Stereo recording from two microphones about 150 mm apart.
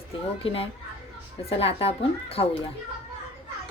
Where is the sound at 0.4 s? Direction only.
40° left (ahead or behind).